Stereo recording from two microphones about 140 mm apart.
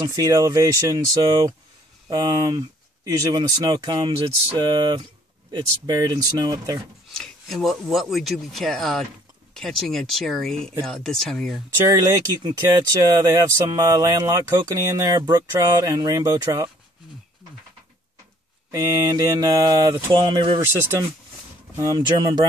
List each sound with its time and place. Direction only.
0.0 s speech: 30° right (ahead or behind)
7.1 s speech: 5° left (ahead or behind)
11.9 s speech: 20° right (ahead or behind)
18.7 s speech: 25° right (ahead or behind)
21.9 s speech: 30° right (ahead or behind)